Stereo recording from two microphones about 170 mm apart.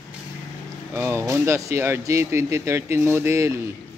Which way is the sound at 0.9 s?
15° right (ahead or behind).